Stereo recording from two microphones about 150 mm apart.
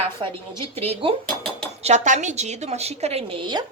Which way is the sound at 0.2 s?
35° right (ahead or behind).